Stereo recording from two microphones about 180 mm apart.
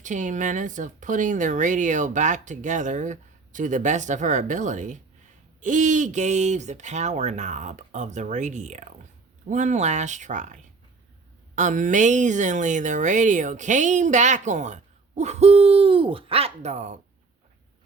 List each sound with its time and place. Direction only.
0.0 s speech: 45° right (ahead or behind)